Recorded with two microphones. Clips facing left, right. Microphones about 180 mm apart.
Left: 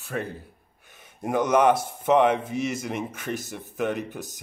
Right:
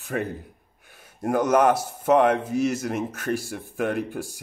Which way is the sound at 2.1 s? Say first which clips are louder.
Right 1 dB; 5° left (ahead or behind).